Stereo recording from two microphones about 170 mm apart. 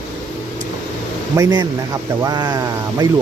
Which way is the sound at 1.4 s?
25° right (ahead or behind).